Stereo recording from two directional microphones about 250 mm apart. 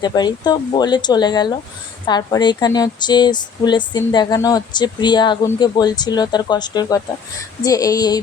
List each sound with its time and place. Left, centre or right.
0.0 s speech: centre